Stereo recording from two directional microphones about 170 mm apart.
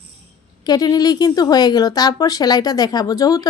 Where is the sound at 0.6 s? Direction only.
20° left (ahead or behind).